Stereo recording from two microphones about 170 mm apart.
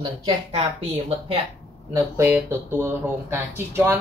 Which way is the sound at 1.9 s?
15° right (ahead or behind).